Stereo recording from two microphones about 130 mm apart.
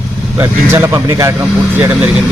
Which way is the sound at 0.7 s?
20° right (ahead or behind).